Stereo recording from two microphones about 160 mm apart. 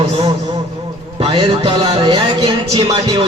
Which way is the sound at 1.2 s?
30° right (ahead or behind).